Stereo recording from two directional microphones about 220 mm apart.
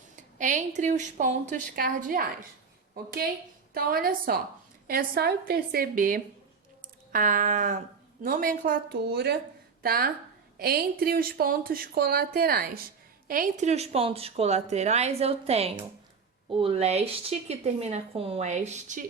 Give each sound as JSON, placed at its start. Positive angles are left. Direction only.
{"t": 0.2, "sound": "speech", "side_deg": -35}
{"t": 3.8, "sound": "a woman's voice", "side_deg": -45}